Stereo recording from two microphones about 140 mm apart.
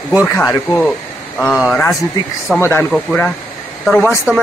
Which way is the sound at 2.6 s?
15° left (ahead or behind).